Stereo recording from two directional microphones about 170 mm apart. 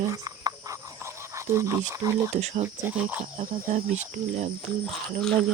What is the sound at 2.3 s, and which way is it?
Speech, 40° right (ahead or behind).